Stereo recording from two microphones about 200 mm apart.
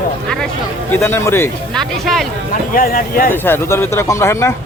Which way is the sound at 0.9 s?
10° left (ahead or behind).